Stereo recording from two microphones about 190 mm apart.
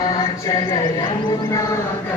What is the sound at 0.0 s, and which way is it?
Speech, 20° left (ahead or behind).